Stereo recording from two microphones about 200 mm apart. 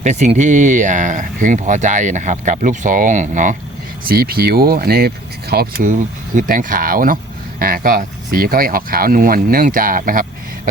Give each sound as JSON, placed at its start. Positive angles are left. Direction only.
{"t": 0.0, "sound": "speech", "side_deg": -35}
{"t": 4.1, "sound": "speech", "side_deg": -50}